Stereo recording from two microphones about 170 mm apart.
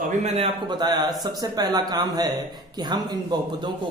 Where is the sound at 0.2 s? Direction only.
35° right (ahead or behind).